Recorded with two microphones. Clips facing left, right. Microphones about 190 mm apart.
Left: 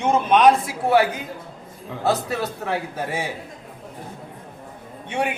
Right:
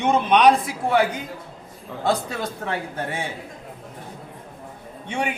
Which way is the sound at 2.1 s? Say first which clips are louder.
Left 1 dB; 5° left (ahead or behind).